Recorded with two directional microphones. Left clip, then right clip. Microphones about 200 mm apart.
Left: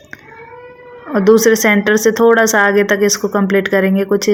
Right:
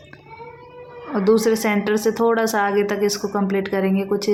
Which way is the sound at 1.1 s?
25° left (ahead or behind).